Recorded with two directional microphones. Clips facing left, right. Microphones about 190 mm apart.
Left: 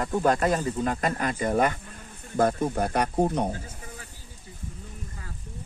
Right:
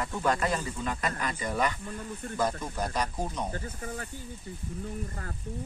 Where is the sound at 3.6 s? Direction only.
60° right (ahead or behind).